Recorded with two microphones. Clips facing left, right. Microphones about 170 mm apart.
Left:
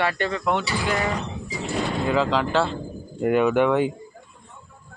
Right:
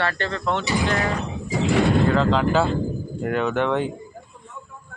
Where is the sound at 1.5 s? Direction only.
80° right.